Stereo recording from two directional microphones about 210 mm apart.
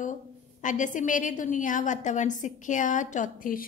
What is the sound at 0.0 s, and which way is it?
A woman's voice, 35° left (ahead or behind).